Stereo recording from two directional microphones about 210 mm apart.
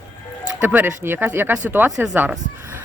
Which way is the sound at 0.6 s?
10° right (ahead or behind).